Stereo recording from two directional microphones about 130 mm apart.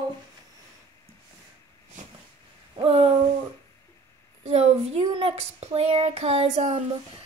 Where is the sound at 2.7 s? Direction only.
45° right (ahead or behind).